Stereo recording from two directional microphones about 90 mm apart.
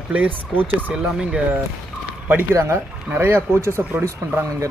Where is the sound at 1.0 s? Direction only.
10° right (ahead or behind).